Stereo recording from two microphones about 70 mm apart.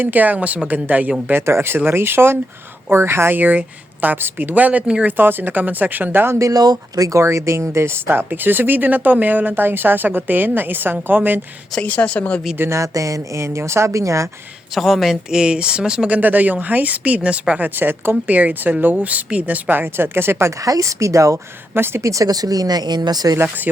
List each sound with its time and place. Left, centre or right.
0.0 s speech: right
1.3 s speech: right; by 5.1 s centre
5.1 s speech: right
6.4 s speech: right
11.8 s a woman's voice: centre
12.5 s speech: right
14.8 s speech: centre
16.0 s speech: right
17.7 s speech: right
20.6 s speech: right